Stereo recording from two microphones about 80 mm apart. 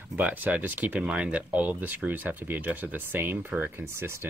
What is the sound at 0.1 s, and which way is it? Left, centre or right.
Speech, centre.